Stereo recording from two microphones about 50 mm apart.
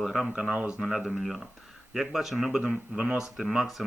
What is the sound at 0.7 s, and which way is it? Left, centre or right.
Speech, centre.